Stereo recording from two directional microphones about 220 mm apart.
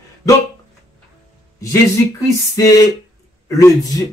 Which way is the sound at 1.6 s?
15° left (ahead or behind).